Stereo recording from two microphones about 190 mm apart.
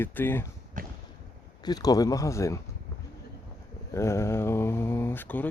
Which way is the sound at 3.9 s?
15° left (ahead or behind).